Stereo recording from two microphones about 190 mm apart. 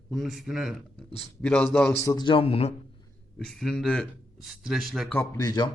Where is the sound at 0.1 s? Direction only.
Centre (ahead or behind).